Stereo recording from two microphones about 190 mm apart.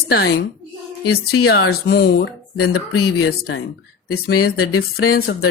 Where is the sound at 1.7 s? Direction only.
55° left (ahead or behind).